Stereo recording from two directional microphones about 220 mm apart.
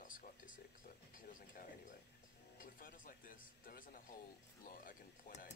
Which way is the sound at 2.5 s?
40° left (ahead or behind).